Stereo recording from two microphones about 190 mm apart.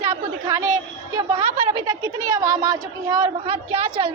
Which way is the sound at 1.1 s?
25° right (ahead or behind).